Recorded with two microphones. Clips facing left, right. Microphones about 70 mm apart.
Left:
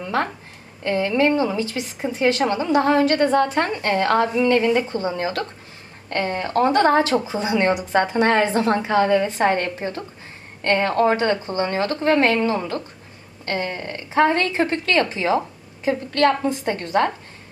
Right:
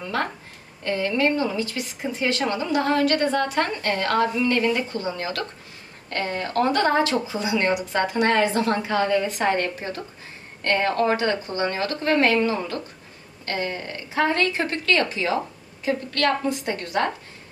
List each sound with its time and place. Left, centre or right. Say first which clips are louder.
0.8 s a woman's voice: left 3 dB; left